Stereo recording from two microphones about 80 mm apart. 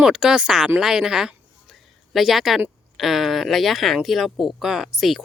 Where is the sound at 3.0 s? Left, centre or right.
Centre.